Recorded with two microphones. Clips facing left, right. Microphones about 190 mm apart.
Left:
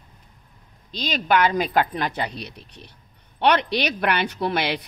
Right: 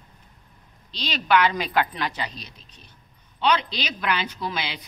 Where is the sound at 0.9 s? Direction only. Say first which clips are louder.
Left 1 dB; 50° left (ahead or behind).